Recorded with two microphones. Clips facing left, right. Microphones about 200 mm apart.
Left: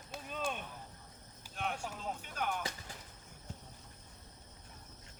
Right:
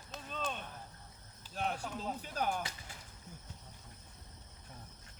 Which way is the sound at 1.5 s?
35° right (ahead or behind).